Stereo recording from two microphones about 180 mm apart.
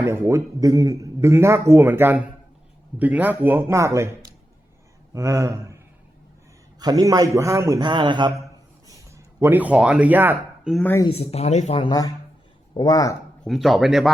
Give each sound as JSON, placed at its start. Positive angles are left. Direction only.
{"t": 0.0, "sound": "a man's voice", "side_deg": -15}
{"t": 10.8, "sound": "speech", "side_deg": 15}
{"t": 11.1, "sound": "speech", "side_deg": 35}
{"t": 13.4, "sound": "speech", "side_deg": 0}